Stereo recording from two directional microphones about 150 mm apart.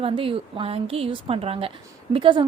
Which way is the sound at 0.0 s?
35° right (ahead or behind).